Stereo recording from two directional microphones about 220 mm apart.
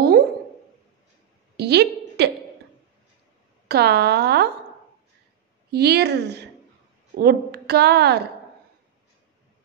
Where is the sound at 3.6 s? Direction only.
45° right (ahead or behind).